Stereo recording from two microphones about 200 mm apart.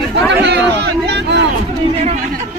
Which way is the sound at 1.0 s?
60° right (ahead or behind).